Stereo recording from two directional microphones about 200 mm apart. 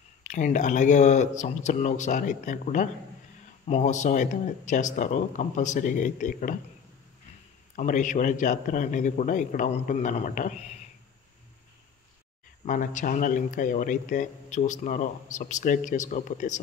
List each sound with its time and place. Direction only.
0.2 s speech: 40° left (ahead or behind)
7.7 s speech: 40° left (ahead or behind)
12.6 s speech: 40° left (ahead or behind)